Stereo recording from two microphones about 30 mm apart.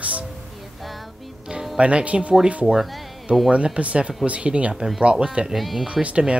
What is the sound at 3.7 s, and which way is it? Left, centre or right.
Speech, right.